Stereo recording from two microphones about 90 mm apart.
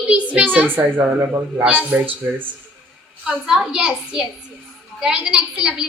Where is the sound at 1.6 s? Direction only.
15° right (ahead or behind).